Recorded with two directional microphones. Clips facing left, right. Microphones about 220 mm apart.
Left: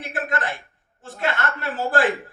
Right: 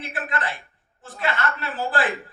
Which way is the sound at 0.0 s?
45° left (ahead or behind).